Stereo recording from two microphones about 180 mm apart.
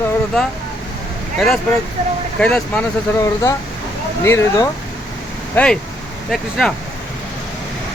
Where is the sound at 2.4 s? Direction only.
5° left (ahead or behind).